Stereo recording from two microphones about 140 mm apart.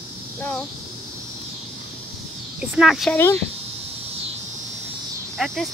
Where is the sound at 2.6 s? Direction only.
5° right (ahead or behind).